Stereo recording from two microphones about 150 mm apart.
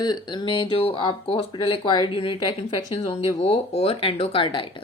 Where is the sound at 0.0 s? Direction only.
30° left (ahead or behind).